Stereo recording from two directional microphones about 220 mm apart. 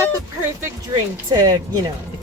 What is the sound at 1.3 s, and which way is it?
Speech, 20° right (ahead or behind).